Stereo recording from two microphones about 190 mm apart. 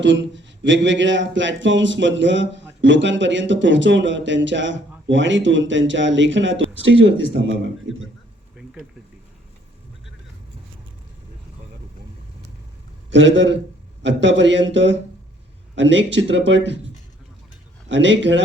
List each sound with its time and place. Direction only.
0.0 s speech: 75° right (ahead or behind)
13.1 s speech: 75° right (ahead or behind)
17.8 s speech: 75° right (ahead or behind)